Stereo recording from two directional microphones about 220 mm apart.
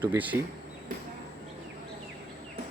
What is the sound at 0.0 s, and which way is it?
Speech, 10° right (ahead or behind).